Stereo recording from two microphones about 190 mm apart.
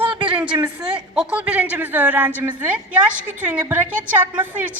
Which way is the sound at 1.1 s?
5° right (ahead or behind).